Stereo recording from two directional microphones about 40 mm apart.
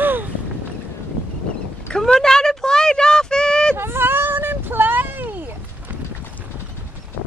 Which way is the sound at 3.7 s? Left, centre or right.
Right.